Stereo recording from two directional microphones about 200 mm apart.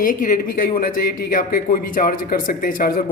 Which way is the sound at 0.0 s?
40° left (ahead or behind).